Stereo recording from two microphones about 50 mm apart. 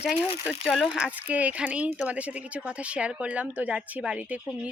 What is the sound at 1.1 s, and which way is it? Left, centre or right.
Speech, right.